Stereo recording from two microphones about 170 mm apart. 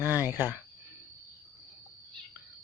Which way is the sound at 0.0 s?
10° right (ahead or behind).